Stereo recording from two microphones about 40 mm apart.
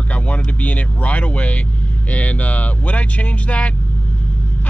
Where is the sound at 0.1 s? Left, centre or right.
Left.